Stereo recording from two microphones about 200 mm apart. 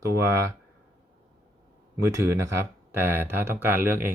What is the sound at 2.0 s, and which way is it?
Speech, 15° right (ahead or behind).